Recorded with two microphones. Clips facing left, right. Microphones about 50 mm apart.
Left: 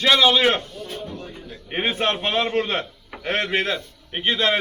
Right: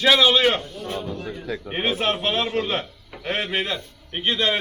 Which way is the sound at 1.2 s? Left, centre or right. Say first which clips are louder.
Right 7 dB; right.